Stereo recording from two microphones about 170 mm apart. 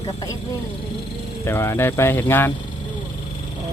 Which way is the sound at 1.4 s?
15° left (ahead or behind).